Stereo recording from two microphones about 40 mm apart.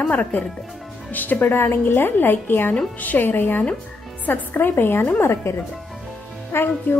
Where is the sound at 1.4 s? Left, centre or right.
Left.